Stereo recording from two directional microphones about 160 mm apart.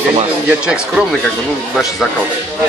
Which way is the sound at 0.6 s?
5° right (ahead or behind).